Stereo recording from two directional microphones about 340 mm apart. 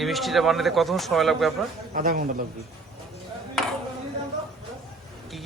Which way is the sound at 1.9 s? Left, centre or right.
Right.